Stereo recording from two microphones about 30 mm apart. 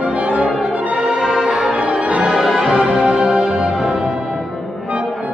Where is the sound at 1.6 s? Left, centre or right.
Right.